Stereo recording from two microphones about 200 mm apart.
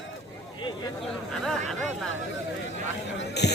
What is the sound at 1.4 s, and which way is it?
Speech, centre (ahead or behind).